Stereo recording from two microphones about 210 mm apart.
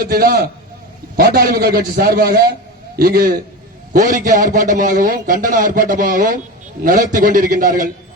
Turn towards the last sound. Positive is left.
turn(degrees=-40)  # may be behind; listen again after turning